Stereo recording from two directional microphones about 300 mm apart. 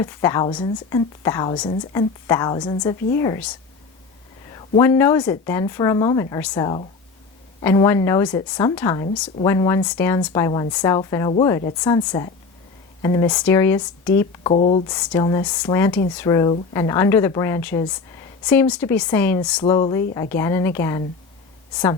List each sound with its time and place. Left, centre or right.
0.0 s a woman's voice: centre
4.5 s a woman's voice: centre
14.5 s a woman's voice: left